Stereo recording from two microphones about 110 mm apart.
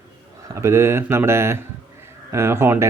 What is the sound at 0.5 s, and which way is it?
Speech, 25° right (ahead or behind).